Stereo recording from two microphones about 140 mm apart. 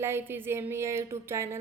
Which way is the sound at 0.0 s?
15° right (ahead or behind).